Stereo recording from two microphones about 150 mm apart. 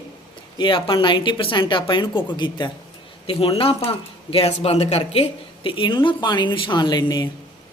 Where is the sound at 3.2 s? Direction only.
40° left (ahead or behind).